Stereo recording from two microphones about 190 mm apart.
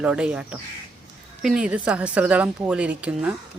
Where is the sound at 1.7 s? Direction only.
5° right (ahead or behind).